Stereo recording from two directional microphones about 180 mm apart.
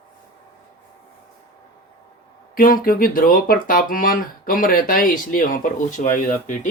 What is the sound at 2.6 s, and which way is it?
Speech, 50° left (ahead or behind).